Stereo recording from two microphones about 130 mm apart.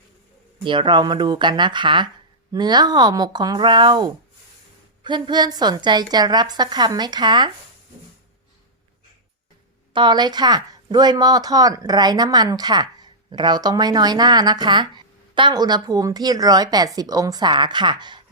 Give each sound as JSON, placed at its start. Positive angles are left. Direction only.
{"t": 0.6, "sound": "speech", "side_deg": -40}
{"t": 9.9, "sound": "speech", "side_deg": -35}